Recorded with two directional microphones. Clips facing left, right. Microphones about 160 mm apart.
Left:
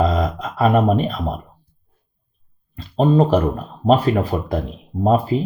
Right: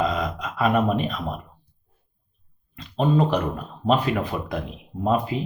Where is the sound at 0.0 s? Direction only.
35° left (ahead or behind).